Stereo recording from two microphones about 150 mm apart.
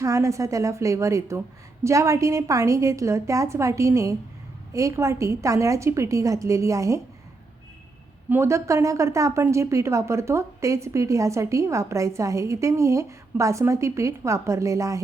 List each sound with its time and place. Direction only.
0.0 s speech: 20° right (ahead or behind)
8.3 s speech: 20° right (ahead or behind)